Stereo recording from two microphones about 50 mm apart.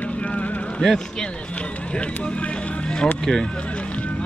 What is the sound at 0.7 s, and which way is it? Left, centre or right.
Speech, centre.